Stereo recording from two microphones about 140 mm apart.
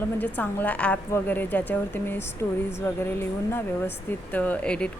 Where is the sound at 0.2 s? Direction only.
10° left (ahead or behind).